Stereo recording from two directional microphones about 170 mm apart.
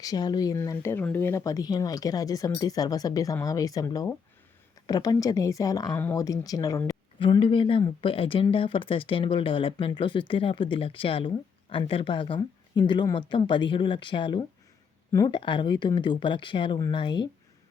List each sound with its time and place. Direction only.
0.0 s speech: 20° left (ahead or behind)